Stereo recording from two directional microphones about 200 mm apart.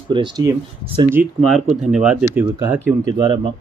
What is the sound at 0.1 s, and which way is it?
Speech, 20° right (ahead or behind).